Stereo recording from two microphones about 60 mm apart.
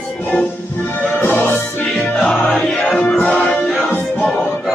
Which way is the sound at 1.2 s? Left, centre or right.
Left.